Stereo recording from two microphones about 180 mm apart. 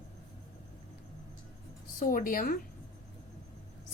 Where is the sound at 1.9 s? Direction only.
50° left (ahead or behind).